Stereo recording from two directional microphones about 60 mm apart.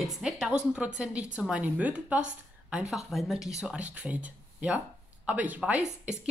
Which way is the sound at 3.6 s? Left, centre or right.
Right.